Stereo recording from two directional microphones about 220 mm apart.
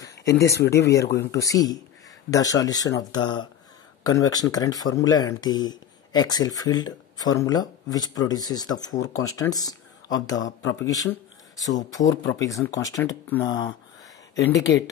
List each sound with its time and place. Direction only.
0.0 s speech: 15° left (ahead or behind)
10.8 s a sound: 15° left (ahead or behind)
11.7 s speech: 15° left (ahead or behind)